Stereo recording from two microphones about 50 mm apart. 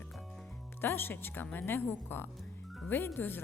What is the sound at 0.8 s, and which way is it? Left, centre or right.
Speech, left.